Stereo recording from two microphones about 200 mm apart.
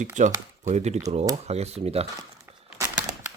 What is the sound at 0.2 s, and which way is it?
Speech, 40° right (ahead or behind).